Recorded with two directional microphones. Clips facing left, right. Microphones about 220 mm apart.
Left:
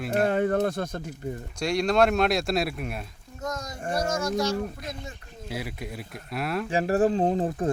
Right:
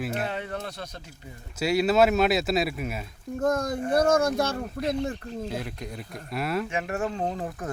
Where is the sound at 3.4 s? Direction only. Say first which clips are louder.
Right 8 dB; 55° right (ahead or behind).